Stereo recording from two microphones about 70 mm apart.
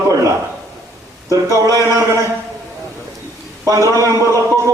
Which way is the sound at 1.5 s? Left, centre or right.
Right.